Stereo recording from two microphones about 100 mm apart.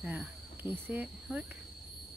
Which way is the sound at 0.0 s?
15° right (ahead or behind).